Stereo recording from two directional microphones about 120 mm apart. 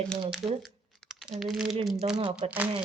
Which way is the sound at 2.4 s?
55° right (ahead or behind).